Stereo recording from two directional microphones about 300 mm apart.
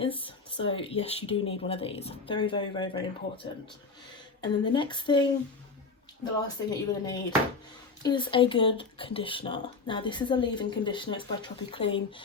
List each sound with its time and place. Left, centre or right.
0.0 s speech: centre
6.7 s speech: centre